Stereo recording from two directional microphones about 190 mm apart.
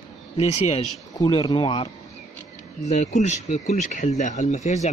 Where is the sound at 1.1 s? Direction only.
20° left (ahead or behind).